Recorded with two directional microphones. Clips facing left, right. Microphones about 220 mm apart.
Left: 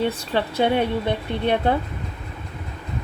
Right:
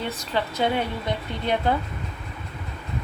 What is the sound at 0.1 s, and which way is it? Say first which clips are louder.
Speech: left 3 dB; 30° left (ahead or behind).